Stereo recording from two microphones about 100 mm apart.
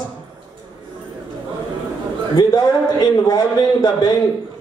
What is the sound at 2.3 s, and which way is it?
Speech, 45° left (ahead or behind).